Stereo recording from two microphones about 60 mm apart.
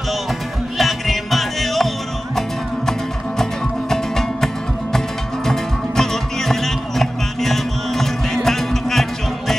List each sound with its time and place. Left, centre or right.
0.7 s music: centre
3.9 s music: centre